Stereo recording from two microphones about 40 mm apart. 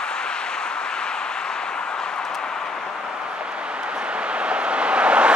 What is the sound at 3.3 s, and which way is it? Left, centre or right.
Vehicle, right.